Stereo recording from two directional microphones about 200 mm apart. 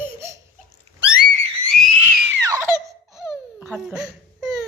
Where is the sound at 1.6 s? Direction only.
Centre (ahead or behind).